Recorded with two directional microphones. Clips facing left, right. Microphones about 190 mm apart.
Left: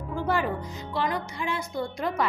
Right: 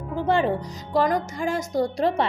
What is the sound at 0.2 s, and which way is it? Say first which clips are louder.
Speech: right 5 dB; 25° right (ahead or behind).